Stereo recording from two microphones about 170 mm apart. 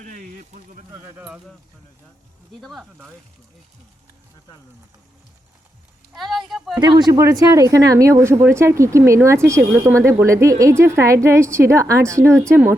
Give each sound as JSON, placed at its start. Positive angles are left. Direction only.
{"t": 0.0, "sound": "a sound", "side_deg": -50}
{"t": 1.0, "sound": "speech", "side_deg": -10}
{"t": 2.6, "sound": "speech", "side_deg": 0}
{"t": 6.1, "sound": "speech", "side_deg": 0}
{"t": 6.7, "sound": "speech", "side_deg": -25}